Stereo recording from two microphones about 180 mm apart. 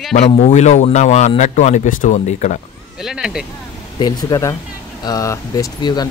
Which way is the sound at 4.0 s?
20° left (ahead or behind).